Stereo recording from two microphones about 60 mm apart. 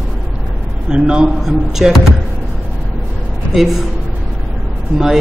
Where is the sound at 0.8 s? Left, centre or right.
Centre.